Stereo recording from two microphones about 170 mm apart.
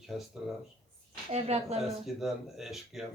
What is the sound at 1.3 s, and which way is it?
Speech, 40° right (ahead or behind).